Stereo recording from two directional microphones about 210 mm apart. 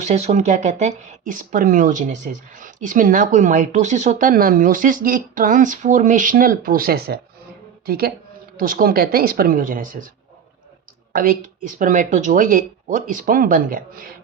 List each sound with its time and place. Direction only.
0.0 s speech: 30° right (ahead or behind)
11.1 s speech: 40° right (ahead or behind)